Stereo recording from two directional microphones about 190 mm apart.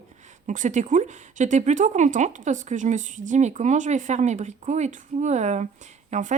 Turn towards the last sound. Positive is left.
turn(degrees=-40)  # may be behind; listen again after turning